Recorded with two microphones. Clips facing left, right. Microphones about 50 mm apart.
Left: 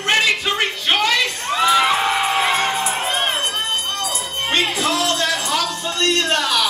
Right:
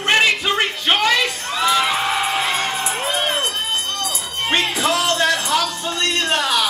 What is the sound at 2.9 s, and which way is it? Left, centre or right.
Crowd, centre.